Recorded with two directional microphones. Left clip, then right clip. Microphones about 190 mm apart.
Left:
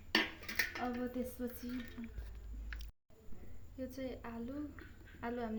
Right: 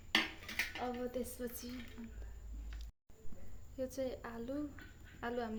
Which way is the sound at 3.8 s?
40° right (ahead or behind).